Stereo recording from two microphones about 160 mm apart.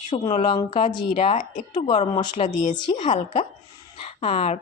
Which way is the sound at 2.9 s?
30° left (ahead or behind).